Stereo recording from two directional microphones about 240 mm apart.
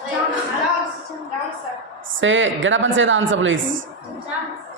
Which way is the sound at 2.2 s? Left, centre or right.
Right.